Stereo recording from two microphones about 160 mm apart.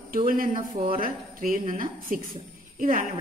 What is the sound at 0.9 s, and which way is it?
Speech, 60° right (ahead or behind).